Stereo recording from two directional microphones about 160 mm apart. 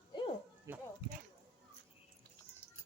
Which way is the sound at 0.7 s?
15° right (ahead or behind).